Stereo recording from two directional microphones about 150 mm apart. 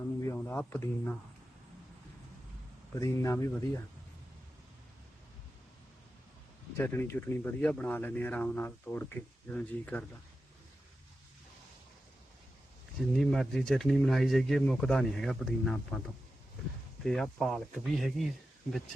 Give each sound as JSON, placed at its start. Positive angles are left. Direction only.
{"t": 0.2, "sound": "a sound", "side_deg": 20}
{"t": 0.5, "sound": "speech", "side_deg": 10}
{"t": 3.0, "sound": "speech", "side_deg": 20}
{"t": 6.7, "sound": "speech", "side_deg": 15}
{"t": 13.0, "sound": "speech", "side_deg": 0}
{"t": 17.0, "sound": "speech", "side_deg": 0}